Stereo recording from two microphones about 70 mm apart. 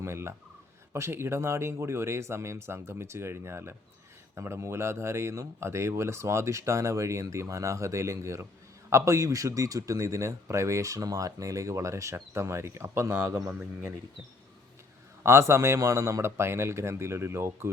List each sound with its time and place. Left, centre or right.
0.0 s speech: right
15.2 s speech: right